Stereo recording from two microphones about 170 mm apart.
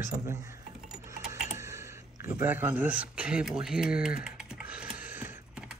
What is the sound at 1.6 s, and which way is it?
Speech, 15° right (ahead or behind).